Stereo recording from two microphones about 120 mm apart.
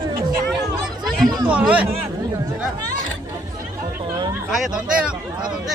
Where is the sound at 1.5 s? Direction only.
10° right (ahead or behind).